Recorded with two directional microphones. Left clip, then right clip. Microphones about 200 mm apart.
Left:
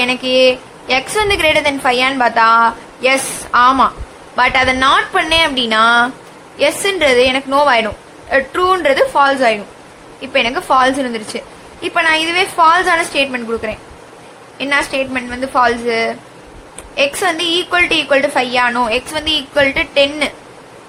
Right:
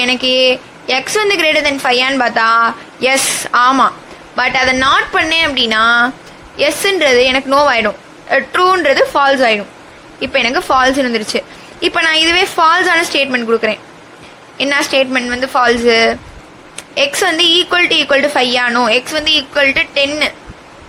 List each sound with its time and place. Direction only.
0.0 s a woman's voice: 20° right (ahead or behind)